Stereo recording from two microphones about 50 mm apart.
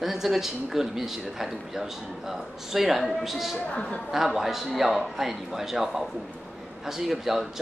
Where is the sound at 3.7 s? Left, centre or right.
Left.